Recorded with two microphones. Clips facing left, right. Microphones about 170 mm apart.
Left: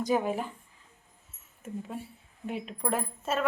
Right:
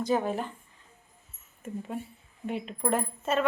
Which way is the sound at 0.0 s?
10° left (ahead or behind).